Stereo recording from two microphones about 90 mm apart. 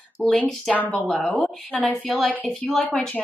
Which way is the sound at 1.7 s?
15° left (ahead or behind).